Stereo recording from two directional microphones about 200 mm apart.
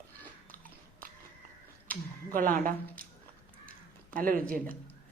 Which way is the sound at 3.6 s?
45° right (ahead or behind).